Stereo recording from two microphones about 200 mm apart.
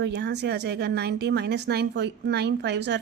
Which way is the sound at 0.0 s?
60° right (ahead or behind).